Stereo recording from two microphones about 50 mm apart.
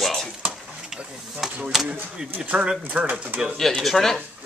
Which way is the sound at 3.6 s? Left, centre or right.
Centre.